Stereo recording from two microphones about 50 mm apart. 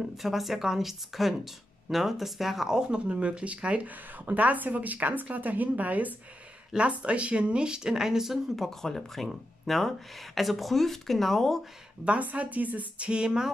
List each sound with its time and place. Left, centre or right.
0.0 s speech: centre
2.8 s speech: right
8.5 s speech: centre
12.0 s speech: right